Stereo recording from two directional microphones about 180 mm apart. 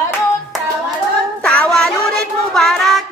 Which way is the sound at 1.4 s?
5° left (ahead or behind).